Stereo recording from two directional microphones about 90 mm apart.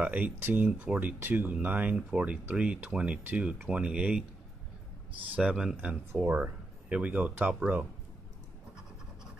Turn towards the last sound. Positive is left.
turn(degrees=-15)  # may be behind; listen again after turning